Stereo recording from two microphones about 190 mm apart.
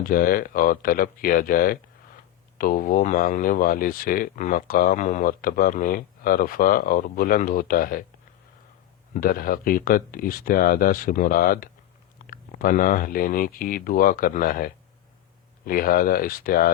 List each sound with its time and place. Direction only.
0.0 s speech: 50° left (ahead or behind)
9.1 s speech: 50° left (ahead or behind)